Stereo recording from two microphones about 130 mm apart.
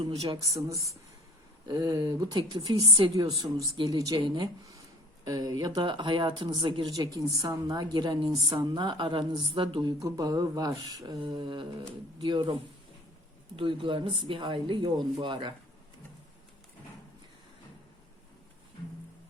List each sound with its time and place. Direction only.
0.0 s speech: 30° right (ahead or behind)
13.6 s speech: 40° right (ahead or behind)